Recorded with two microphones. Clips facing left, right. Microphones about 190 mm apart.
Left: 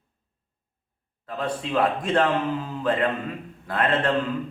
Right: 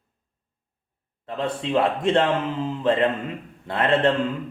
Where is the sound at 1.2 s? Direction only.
25° right (ahead or behind).